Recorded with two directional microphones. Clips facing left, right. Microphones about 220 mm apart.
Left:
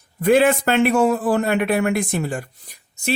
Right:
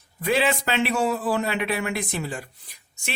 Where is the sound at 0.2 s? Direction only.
50° left (ahead or behind).